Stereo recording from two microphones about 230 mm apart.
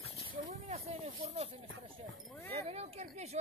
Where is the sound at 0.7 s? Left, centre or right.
Right.